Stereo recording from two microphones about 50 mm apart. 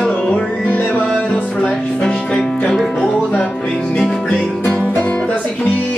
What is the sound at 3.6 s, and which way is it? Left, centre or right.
Music, centre.